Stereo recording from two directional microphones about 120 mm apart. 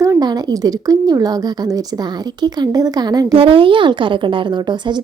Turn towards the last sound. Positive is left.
turn(degrees=-40)  # may be behind; listen again after turning